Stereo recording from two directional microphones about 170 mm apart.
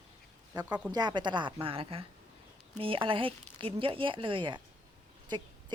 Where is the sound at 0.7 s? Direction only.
10° right (ahead or behind).